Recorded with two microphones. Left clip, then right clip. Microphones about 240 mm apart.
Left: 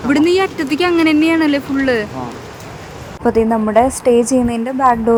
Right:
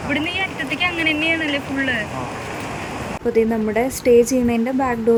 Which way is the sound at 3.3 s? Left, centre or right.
Centre.